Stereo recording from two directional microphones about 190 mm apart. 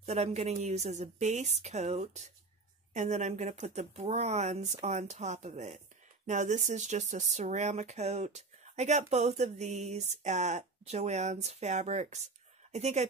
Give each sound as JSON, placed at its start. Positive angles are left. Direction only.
{"t": 0.0, "sound": "speech", "side_deg": -35}